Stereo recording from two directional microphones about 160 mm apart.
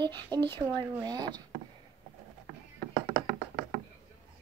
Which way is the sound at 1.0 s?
25° right (ahead or behind).